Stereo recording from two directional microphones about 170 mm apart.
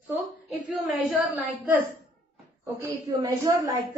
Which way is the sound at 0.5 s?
Centre (ahead or behind).